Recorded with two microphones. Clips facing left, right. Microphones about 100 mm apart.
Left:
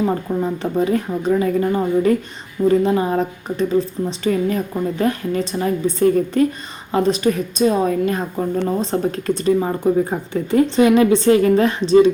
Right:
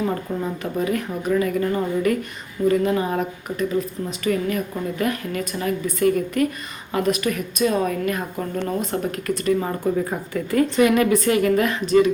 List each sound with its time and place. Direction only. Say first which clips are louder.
0.3 s a woman's voice: left 5 dB; 20° left (ahead or behind)